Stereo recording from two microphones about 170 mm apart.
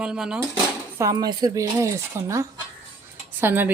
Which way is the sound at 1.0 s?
20° right (ahead or behind).